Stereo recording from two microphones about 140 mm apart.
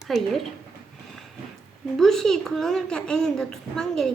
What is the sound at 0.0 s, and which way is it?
Speech, centre (ahead or behind).